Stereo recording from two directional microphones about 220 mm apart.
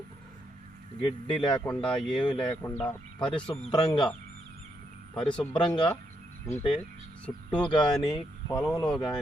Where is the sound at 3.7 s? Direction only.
20° left (ahead or behind).